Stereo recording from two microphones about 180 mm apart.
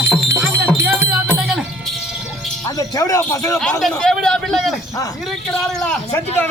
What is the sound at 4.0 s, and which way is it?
Speech, 5° left (ahead or behind).